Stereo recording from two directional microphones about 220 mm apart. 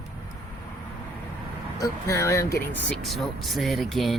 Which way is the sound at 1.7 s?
15° left (ahead or behind).